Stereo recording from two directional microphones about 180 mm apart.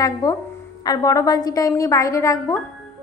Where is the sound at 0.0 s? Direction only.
20° left (ahead or behind).